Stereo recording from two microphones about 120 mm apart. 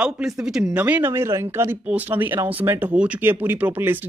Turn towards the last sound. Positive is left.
turn(degrees=-15)  # may be behind; listen again after turning